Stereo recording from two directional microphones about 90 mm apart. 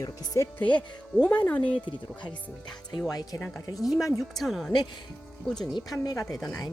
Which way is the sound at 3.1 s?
40° left (ahead or behind).